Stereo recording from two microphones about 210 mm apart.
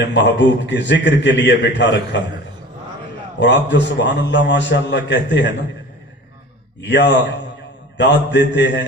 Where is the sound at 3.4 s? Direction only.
55° left (ahead or behind).